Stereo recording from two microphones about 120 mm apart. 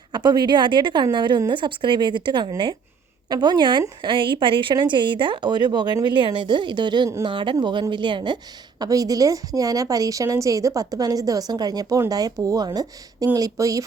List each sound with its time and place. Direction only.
0.1 s a woman's voice: 35° right (ahead or behind)
8.8 s a woman's voice: 30° right (ahead or behind)